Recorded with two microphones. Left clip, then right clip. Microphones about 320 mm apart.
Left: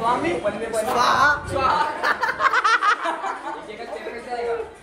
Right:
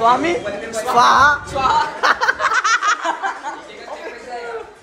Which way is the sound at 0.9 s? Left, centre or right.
Centre.